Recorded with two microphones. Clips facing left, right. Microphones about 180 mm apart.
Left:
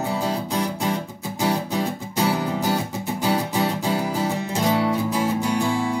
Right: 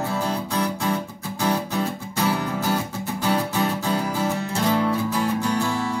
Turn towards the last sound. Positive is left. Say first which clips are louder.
# left 2 dB
turn(degrees=15)  # may be behind; listen again after turning